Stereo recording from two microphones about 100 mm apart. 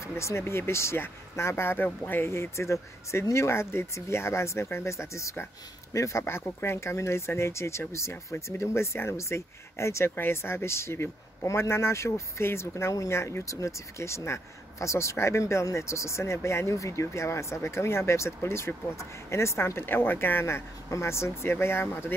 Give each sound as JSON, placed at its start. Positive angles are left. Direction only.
{"t": 0.0, "sound": "speech", "side_deg": 30}